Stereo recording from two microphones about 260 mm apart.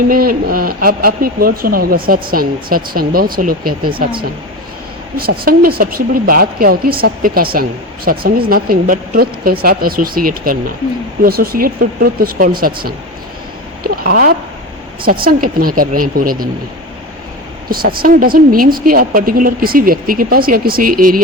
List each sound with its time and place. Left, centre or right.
0.1 s a woman's voice: right
5.1 s a woman's voice: right
13.8 s a sound: right
15.0 s a woman's voice: right
17.7 s a woman's voice: right